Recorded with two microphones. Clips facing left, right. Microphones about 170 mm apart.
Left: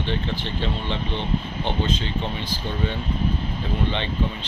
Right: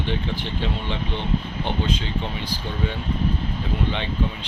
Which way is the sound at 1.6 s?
10° right (ahead or behind).